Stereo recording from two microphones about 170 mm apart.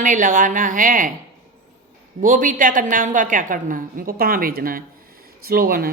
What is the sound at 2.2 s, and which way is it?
A woman's voice, 50° right (ahead or behind).